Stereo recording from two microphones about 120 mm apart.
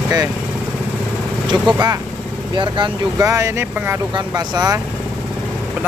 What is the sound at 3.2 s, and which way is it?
Speech, 25° right (ahead or behind).